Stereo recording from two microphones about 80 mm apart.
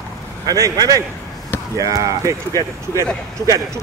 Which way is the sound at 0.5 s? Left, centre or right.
Right.